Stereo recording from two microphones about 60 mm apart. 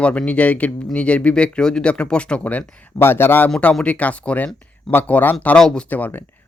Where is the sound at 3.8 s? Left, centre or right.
Left.